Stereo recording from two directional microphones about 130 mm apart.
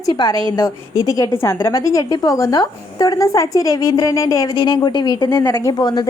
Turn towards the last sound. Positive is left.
turn(degrees=30)  # may be behind; listen again after turning